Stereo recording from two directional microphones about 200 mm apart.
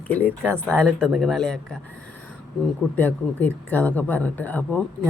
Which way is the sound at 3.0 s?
10° left (ahead or behind).